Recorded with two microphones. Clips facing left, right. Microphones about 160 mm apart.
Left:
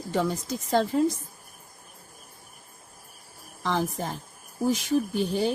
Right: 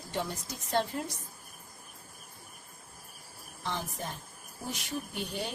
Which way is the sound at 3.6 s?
90° left.